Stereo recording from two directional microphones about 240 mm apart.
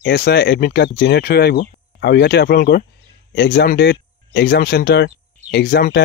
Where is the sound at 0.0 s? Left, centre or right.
Left.